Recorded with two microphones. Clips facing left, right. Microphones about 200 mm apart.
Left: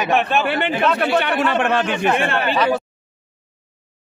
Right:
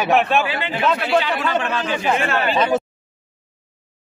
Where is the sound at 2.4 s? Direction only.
20° right (ahead or behind).